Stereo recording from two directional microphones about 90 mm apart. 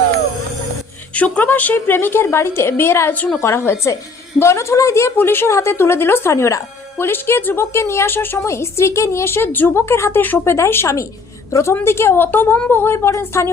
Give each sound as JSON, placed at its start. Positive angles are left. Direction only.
{"t": 1.1, "sound": "a woman's voice", "side_deg": 15}
{"t": 3.4, "sound": "a woman's voice", "side_deg": 30}